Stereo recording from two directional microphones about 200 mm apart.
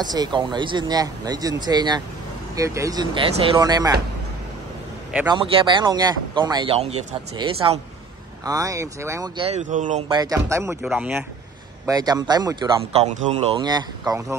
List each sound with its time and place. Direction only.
0.0 s speech: 20° right (ahead or behind)
5.3 s speech: 25° right (ahead or behind)
9.4 s speech: 35° right (ahead or behind)
10.0 s speech: 20° right (ahead or behind); by 11.2 s 5° right (ahead or behind)
11.8 s speech: 20° right (ahead or behind)
12.9 s speech: 35° right (ahead or behind)
13.6 s speech: 20° right (ahead or behind)